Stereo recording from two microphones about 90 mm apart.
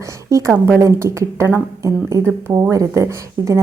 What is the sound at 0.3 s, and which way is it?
Speech, 35° right (ahead or behind).